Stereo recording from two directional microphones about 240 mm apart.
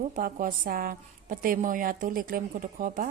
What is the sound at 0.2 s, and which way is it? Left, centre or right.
A woman's voice, right.